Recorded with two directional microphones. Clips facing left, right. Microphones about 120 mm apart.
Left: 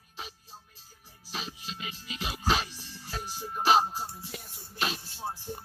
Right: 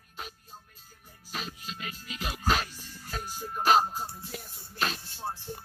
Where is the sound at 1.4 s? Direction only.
50° right (ahead or behind).